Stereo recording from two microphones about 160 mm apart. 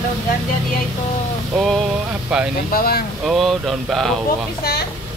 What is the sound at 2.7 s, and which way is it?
Speech, 65° left (ahead or behind).